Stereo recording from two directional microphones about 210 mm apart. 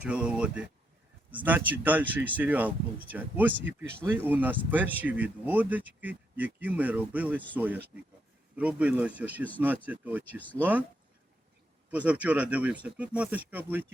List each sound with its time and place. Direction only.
0.0 s speech: 5° right (ahead or behind)
11.9 s speech: 5° right (ahead or behind)